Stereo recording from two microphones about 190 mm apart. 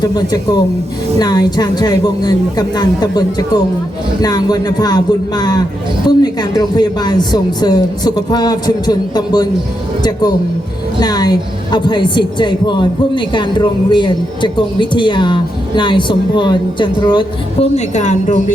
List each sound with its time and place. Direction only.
0.0 s a woman's voice: 20° left (ahead or behind); by 18.5 s 40° left (ahead or behind)